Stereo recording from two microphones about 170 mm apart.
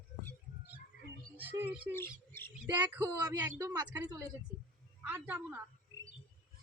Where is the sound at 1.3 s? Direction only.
10° right (ahead or behind).